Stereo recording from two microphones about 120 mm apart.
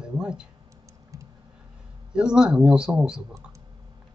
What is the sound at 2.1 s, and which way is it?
Speech, 5° right (ahead or behind).